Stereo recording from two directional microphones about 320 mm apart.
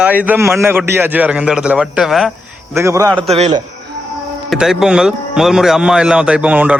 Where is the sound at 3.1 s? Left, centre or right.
Centre.